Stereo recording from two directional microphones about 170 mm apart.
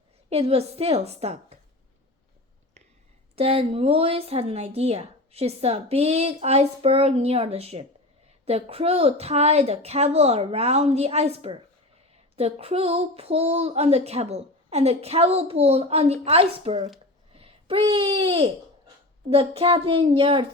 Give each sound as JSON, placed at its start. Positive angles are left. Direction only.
{"t": 0.3, "sound": "speech", "side_deg": -35}
{"t": 3.3, "sound": "speech", "side_deg": -35}
{"t": 17.3, "sound": "a sound", "side_deg": -35}
{"t": 17.9, "sound": "speech", "side_deg": -30}